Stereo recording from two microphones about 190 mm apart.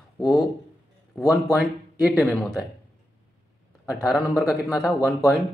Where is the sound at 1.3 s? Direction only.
Centre (ahead or behind).